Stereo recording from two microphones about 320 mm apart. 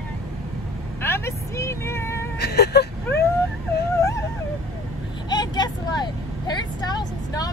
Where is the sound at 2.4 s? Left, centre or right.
Left.